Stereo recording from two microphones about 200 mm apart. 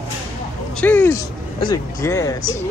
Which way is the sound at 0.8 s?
10° left (ahead or behind).